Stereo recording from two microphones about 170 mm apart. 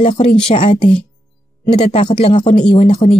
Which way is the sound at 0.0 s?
35° left (ahead or behind).